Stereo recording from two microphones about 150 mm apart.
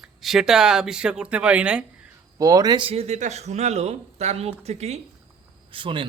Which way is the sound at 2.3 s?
25° right (ahead or behind).